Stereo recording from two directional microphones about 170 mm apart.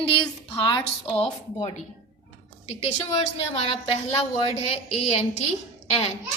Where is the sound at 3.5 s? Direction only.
35° left (ahead or behind).